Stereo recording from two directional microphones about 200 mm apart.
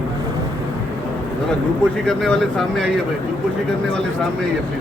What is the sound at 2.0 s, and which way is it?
Speech, 5° left (ahead or behind).